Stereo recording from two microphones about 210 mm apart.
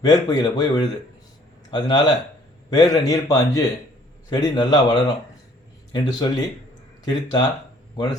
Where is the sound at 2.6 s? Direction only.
20° left (ahead or behind).